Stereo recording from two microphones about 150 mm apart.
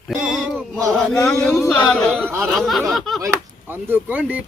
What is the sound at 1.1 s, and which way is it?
Speech, 5° left (ahead or behind).